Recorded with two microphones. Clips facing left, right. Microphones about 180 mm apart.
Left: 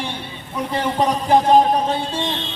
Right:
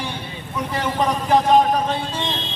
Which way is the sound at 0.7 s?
30° left (ahead or behind).